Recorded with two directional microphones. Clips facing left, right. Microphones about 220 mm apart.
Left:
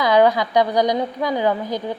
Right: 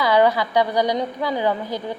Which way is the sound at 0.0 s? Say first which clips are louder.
Left 2 dB; 15° left (ahead or behind).